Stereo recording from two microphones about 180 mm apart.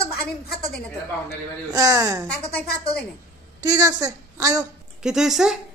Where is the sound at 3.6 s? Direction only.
20° right (ahead or behind).